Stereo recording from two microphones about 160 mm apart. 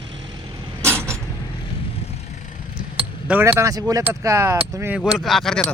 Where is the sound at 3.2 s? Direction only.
10° right (ahead or behind).